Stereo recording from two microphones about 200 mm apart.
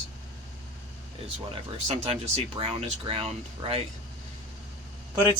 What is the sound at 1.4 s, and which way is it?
Speech, 35° right (ahead or behind).